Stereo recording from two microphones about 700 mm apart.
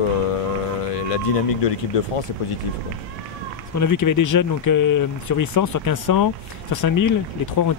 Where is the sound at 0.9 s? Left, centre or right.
Left.